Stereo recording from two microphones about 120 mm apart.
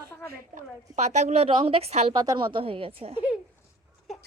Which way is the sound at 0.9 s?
75° right (ahead or behind).